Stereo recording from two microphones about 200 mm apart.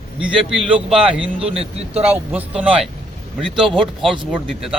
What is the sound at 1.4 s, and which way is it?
Speech, 30° right (ahead or behind).